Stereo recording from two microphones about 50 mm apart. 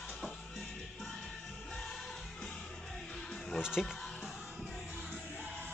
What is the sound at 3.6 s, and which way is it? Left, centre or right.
Speech, centre.